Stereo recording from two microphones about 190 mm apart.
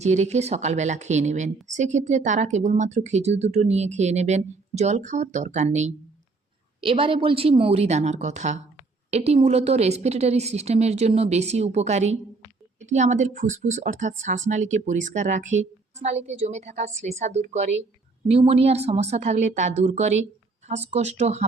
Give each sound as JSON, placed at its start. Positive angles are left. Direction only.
{"t": 0.0, "sound": "speech", "side_deg": -35}